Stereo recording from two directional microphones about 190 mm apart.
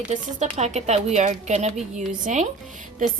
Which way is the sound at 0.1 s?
40° right (ahead or behind).